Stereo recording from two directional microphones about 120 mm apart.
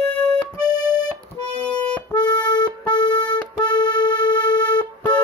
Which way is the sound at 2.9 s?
40° left (ahead or behind).